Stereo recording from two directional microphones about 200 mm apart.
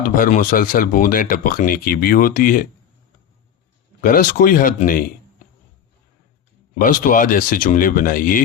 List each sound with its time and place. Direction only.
0.0 s speech: 45° left (ahead or behind)
4.0 s speech: 40° left (ahead or behind)
6.7 s speech: 45° left (ahead or behind)